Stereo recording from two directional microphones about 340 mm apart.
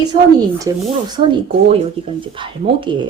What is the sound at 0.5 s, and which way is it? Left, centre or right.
Speech, centre.